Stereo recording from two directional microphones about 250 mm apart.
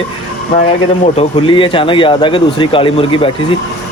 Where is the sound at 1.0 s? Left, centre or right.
Left.